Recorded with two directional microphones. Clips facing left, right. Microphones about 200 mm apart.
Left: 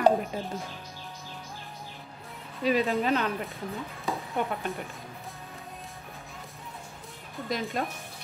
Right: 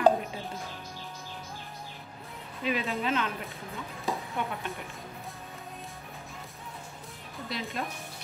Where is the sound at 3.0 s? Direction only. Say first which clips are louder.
Left 3 dB; 40° left (ahead or behind).